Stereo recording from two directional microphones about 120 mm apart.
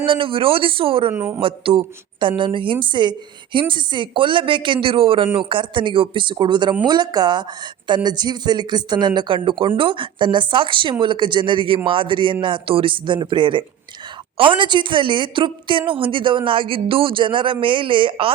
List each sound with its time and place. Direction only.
0.0 s a woman's voice: 45° right (ahead or behind)
1.1 s speech: 20° right (ahead or behind)
1.4 s a woman's voice: 50° right (ahead or behind)